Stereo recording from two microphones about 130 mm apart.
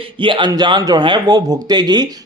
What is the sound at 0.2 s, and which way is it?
A man's voice, 40° right (ahead or behind).